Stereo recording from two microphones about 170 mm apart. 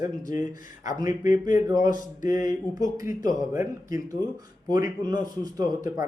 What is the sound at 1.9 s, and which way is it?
Mantra, 50° left (ahead or behind).